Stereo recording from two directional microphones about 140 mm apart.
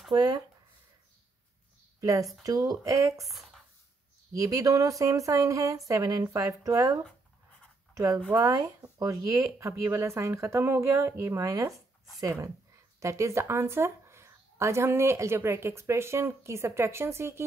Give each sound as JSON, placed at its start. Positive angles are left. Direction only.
{"t": 0.1, "sound": "speech", "side_deg": -30}
{"t": 2.0, "sound": "a sound", "side_deg": -25}
{"t": 2.4, "sound": "speech", "side_deg": -25}
{"t": 3.3, "sound": "speech", "side_deg": 0}
{"t": 4.3, "sound": "speech", "side_deg": -25}